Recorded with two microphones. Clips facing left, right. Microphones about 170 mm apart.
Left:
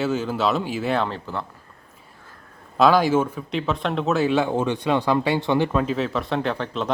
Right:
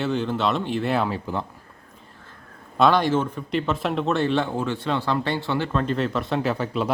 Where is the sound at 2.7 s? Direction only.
Centre (ahead or behind).